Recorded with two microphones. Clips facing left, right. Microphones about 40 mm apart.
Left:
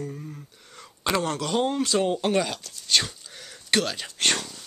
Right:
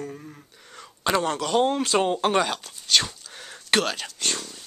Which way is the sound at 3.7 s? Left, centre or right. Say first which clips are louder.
Right 2 dB; centre.